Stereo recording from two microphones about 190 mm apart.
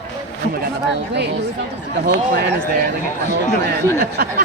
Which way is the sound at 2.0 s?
60° right (ahead or behind).